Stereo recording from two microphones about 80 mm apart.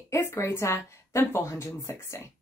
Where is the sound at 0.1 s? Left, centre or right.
Left.